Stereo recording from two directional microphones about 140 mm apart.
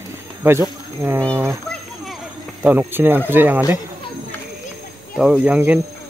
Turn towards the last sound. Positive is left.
turn(degrees=-10)  # may be behind; listen again after turning